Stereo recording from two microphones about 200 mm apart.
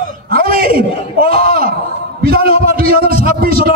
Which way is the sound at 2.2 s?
50° right (ahead or behind).